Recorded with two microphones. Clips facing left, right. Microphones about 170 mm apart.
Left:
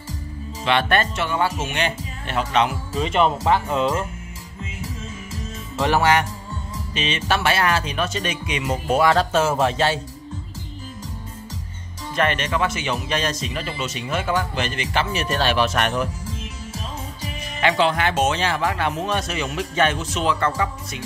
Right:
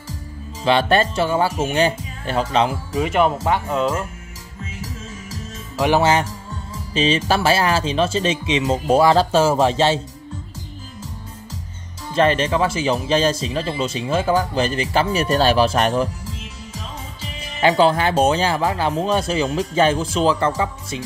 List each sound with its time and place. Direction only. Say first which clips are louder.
0.7 s speech: right 4 dB; 30° right (ahead or behind)
2.9 s speech: right 2 dB; 5° right (ahead or behind)
5.9 s speech: even; 25° right (ahead or behind)
12.2 s speech: right 5 dB; 30° right (ahead or behind)
17.6 s speech: right 4 dB; 35° right (ahead or behind)